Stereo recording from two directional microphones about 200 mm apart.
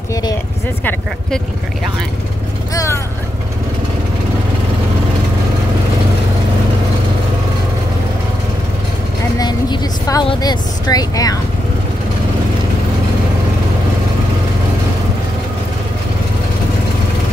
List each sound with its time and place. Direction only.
2.7 s speech: 15° left (ahead or behind)
9.4 s vehicle: 20° left (ahead or behind)